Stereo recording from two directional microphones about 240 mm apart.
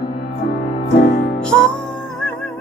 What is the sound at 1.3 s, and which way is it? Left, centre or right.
Music, centre.